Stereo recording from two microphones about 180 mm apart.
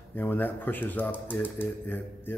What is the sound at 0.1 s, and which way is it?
Speech, 10° left (ahead or behind).